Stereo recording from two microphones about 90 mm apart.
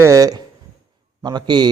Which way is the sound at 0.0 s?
40° right (ahead or behind).